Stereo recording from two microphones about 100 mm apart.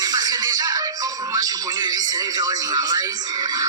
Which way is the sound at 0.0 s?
40° right (ahead or behind).